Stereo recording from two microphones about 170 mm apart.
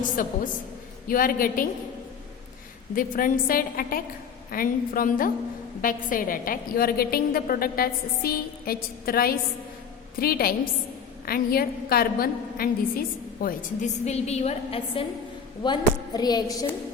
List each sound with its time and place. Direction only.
0.2 s a woman's voice: 55° left (ahead or behind)
2.9 s a woman's voice: 55° left (ahead or behind); by 15.0 s 35° left (ahead or behind)
15.6 s a woman's voice: 25° left (ahead or behind)